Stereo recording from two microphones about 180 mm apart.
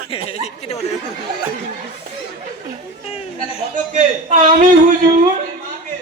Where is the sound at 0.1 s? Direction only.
35° left (ahead or behind).